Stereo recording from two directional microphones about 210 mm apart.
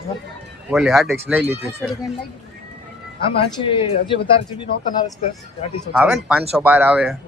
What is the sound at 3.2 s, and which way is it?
Speech, 25° left (ahead or behind).